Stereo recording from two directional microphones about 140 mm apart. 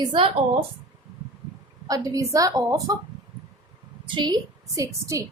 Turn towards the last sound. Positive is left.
turn(degrees=-20)  # may be behind; listen again after turning